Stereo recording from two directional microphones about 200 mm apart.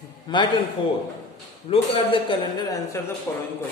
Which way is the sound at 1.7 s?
25° left (ahead or behind).